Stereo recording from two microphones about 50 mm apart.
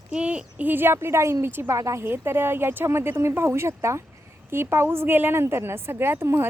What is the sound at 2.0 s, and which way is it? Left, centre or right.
A woman's voice, right.